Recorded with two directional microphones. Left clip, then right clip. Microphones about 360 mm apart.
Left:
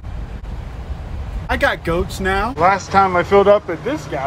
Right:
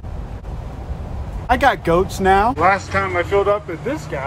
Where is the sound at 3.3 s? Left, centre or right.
Left.